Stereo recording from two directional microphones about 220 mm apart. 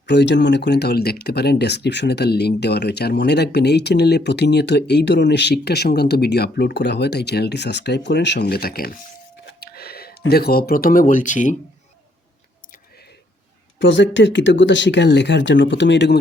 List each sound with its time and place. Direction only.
0.1 s speech: 50° left (ahead or behind); by 11.5 s 35° left (ahead or behind)
13.7 s speech: 55° left (ahead or behind)